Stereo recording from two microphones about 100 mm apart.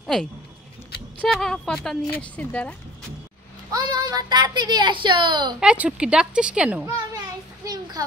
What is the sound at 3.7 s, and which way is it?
A woman's voice, 40° right (ahead or behind).